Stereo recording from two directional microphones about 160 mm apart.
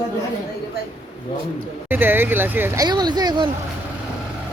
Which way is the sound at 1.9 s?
10° right (ahead or behind).